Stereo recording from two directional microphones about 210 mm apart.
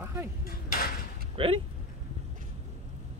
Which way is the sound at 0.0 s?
10° right (ahead or behind).